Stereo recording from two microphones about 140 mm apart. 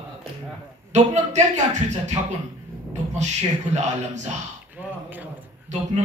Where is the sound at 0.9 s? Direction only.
55° right (ahead or behind).